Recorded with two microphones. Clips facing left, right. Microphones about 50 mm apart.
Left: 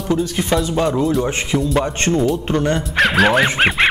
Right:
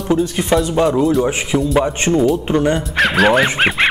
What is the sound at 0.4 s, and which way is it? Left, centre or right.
A man's voice, centre.